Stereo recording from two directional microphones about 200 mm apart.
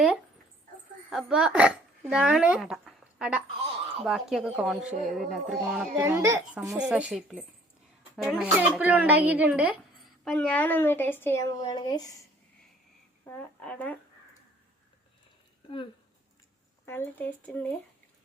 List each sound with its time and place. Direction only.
1.1 s speech: 5° right (ahead or behind)
6.0 s speech: 15° right (ahead or behind)
10.2 s a woman's voice: 5° left (ahead or behind)
13.2 s a woman's voice: 10° left (ahead or behind)
16.8 s a woman's voice: 10° left (ahead or behind)